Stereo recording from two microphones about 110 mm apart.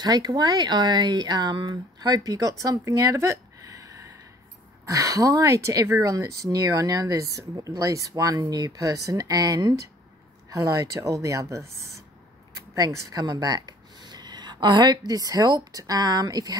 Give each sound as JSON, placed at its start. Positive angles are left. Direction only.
{"t": 0.0, "sound": "a woman's voice", "side_deg": -40}